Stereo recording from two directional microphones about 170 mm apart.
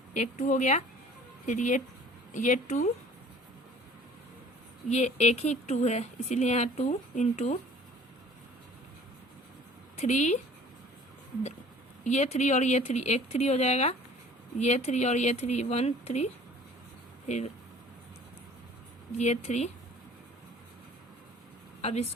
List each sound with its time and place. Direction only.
0.1 s speech: 45° left (ahead or behind)
4.9 s speech: 40° left (ahead or behind)
10.0 s speech: 45° left (ahead or behind)
12.0 s speech: 40° left (ahead or behind)
19.1 s speech: 40° left (ahead or behind)
21.8 s a sound: 35° left (ahead or behind)